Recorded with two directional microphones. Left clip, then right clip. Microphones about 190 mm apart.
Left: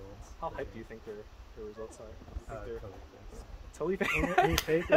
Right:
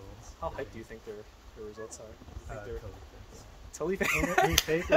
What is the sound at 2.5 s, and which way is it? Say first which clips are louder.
Speech: even; 20° right (ahead or behind).